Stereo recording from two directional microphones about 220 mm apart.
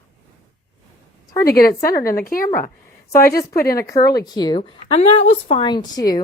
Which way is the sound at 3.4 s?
15° left (ahead or behind).